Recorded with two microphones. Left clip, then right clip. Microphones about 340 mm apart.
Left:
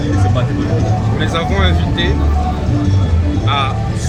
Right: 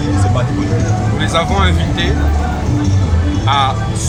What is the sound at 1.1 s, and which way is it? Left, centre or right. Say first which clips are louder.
Speech: right 4 dB; centre.